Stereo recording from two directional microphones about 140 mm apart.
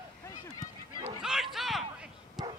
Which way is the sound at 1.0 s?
5° right (ahead or behind).